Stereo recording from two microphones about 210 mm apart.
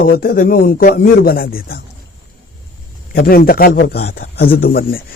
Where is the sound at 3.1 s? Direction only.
45° left (ahead or behind).